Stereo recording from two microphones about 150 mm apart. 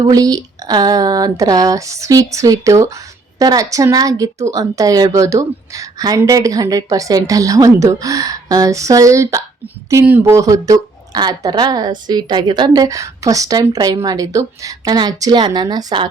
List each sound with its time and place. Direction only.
0.0 s a woman's voice: 25° right (ahead or behind)